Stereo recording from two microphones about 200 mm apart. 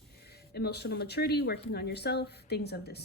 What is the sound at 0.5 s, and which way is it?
A woman's voice, 55° left (ahead or behind).